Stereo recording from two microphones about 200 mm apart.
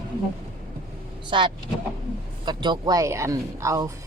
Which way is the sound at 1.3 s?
25° right (ahead or behind).